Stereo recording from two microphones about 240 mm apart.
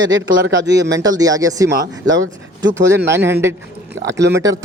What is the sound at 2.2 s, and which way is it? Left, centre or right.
Speech, right.